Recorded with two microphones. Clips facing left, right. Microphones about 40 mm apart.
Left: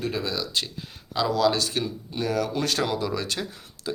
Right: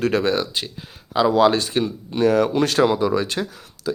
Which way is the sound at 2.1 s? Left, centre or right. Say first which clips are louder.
Right 9 dB; right.